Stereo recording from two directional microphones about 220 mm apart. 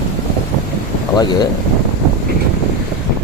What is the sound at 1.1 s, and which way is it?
Speech, 20° left (ahead or behind).